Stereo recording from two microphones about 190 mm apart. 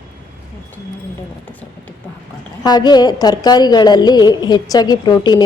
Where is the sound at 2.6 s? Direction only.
20° left (ahead or behind).